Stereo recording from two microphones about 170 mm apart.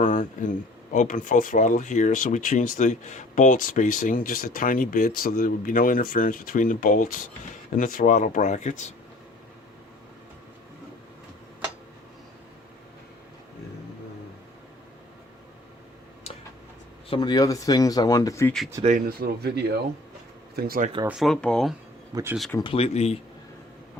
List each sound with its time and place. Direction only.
0.0 s a sound: 50° left (ahead or behind)
0.9 s speech: 50° left (ahead or behind)
17.1 s speech: 25° left (ahead or behind)
18.9 s speech: 55° right (ahead or behind); by 19.7 s 75° right (ahead or behind)
20.6 s speech: 60° right (ahead or behind)
21.1 s speech: centre (ahead or behind)
22.1 s speech: 15° right (ahead or behind)
22.5 s speech: 30° left (ahead or behind)